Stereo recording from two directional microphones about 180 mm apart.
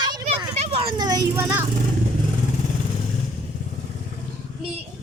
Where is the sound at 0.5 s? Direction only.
35° right (ahead or behind).